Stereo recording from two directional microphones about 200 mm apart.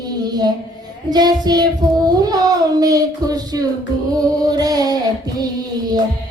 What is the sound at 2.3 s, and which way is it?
Speech, 20° right (ahead or behind).